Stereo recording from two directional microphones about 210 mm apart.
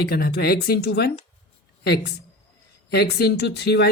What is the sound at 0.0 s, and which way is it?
Speech, 45° left (ahead or behind).